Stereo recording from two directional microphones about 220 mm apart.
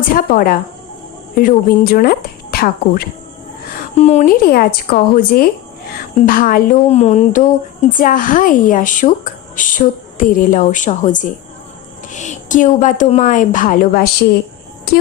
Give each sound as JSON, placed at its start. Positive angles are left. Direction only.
{"t": 0.1, "sound": "a woman's voice", "side_deg": 40}